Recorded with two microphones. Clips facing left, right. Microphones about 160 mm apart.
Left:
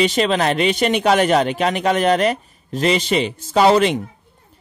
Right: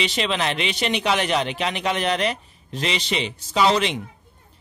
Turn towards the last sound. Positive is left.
turn(degrees=50)  # may be behind; listen again after turning